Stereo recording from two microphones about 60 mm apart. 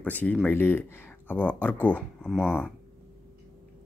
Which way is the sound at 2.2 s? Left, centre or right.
Centre.